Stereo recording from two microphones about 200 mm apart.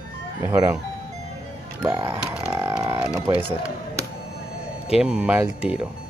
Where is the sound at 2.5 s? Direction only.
15° right (ahead or behind).